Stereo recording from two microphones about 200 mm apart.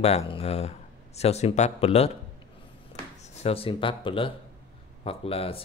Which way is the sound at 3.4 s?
30° left (ahead or behind).